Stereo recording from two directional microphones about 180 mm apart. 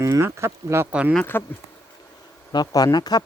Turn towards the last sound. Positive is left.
turn(degrees=20)  # may be behind; listen again after turning